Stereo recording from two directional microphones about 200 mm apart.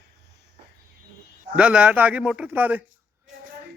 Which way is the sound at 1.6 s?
5° right (ahead or behind).